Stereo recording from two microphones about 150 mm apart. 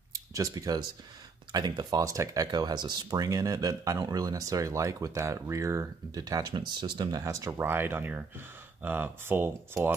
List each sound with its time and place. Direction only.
0.1 s speech: 20° right (ahead or behind)